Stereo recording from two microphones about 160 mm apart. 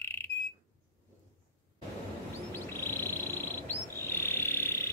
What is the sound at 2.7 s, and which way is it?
Frog, 15° left (ahead or behind).